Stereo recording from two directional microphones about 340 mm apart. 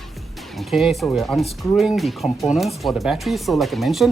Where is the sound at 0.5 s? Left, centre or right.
Centre.